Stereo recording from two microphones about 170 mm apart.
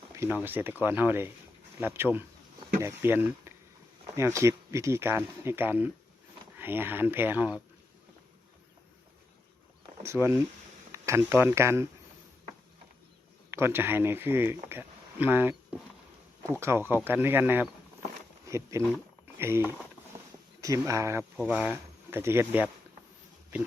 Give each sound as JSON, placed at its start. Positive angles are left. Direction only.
{"t": 0.2, "sound": "speech", "side_deg": -10}
{"t": 10.0, "sound": "speech", "side_deg": -15}
{"t": 13.5, "sound": "speech", "side_deg": -15}